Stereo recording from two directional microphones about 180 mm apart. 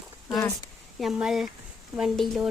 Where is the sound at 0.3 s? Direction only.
20° left (ahead or behind).